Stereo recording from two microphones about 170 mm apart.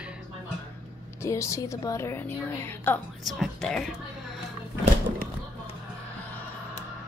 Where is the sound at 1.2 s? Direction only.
15° left (ahead or behind).